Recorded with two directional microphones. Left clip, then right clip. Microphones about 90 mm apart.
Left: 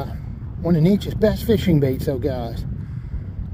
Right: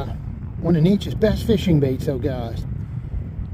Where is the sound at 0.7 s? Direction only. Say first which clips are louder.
Even; centre (ahead or behind).